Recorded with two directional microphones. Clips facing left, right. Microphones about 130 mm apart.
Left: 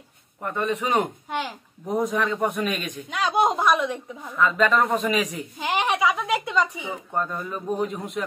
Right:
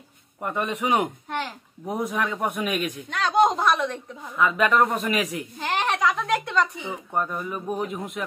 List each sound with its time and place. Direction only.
0.4 s a man's voice: 15° right (ahead or behind)
3.1 s a child's voice: 10° left (ahead or behind)
4.4 s a man's voice: 15° right (ahead or behind)
5.0 s a man's voice: centre (ahead or behind)
5.6 s a child's voice: 10° left (ahead or behind)
7.1 s a man's voice: 10° right (ahead or behind)